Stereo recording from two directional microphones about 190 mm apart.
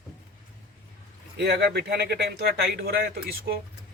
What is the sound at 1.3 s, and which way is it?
Speech, 65° right (ahead or behind).